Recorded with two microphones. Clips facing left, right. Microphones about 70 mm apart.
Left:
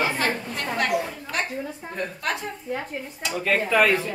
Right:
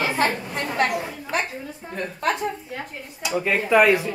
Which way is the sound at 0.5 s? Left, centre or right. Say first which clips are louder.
Right 3 dB; right.